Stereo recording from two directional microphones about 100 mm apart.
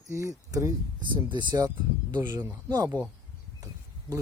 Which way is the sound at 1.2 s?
50° right (ahead or behind).